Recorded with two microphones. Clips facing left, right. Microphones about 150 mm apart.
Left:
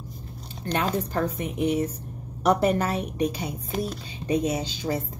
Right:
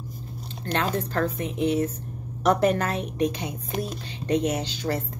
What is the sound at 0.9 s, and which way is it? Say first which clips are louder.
Speech: even; 10° left (ahead or behind).